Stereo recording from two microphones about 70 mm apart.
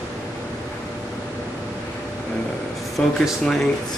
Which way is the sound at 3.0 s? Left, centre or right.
Centre.